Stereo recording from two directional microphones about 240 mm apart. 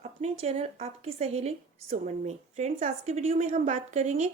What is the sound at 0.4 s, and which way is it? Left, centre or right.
A woman's voice, right.